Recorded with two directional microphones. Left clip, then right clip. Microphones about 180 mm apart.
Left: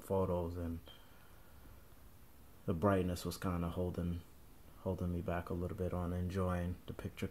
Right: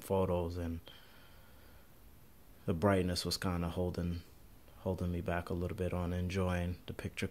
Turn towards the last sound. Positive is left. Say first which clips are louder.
# right 5 dB
turn(degrees=-15)  # may be behind; listen again after turning